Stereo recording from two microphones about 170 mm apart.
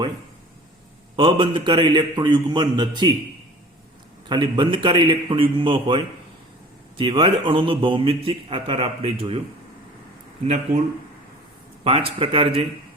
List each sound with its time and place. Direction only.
1.1 s a man's voice: 30° right (ahead or behind)
4.3 s a man's voice: 25° right (ahead or behind)
11.8 s a man's voice: 35° right (ahead or behind)